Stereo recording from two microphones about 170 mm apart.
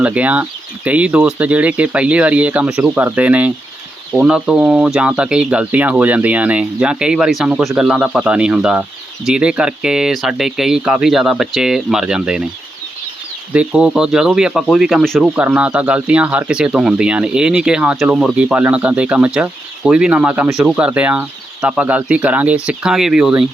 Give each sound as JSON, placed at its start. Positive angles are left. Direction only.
{"t": 0.0, "sound": "speech", "side_deg": -10}
{"t": 13.5, "sound": "speech", "side_deg": -5}